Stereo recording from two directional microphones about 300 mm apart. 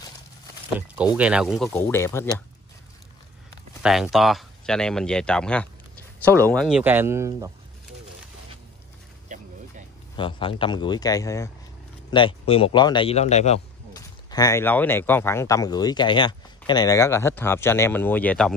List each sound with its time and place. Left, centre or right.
0.7 s speech: centre
3.8 s speech: centre
10.1 s speech: centre